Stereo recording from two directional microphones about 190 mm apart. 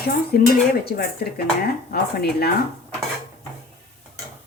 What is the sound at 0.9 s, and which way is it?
Speech, 55° left (ahead or behind).